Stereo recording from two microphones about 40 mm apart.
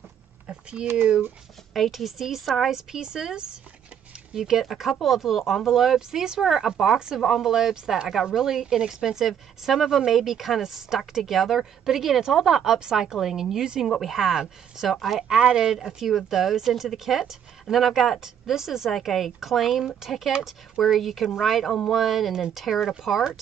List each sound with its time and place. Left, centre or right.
0.5 s a sound: right
1.7 s a woman's voice: centre
5.9 s speech: centre
6.4 s a woman's voice: centre
7.4 s a woman's voice: centre
15.5 s a woman's voice: centre
18.2 s a woman's voice: centre